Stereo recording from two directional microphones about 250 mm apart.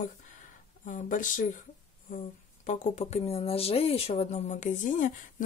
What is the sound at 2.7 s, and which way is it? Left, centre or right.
A woman's voice, left.